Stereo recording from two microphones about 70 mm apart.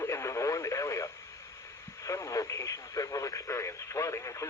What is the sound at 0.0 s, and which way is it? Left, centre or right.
Radio, left.